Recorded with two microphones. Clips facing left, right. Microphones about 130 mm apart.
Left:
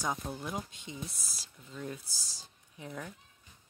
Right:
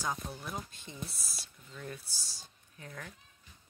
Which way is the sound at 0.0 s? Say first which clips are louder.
Left 2 dB; 20° left (ahead or behind).